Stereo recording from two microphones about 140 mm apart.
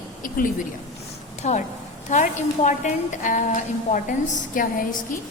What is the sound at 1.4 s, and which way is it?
A woman's voice, 55° left (ahead or behind).